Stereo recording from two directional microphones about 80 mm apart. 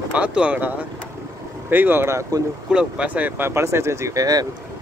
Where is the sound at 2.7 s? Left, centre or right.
Centre.